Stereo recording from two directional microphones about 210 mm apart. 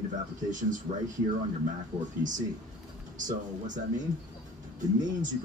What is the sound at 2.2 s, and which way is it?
Speech, 40° right (ahead or behind).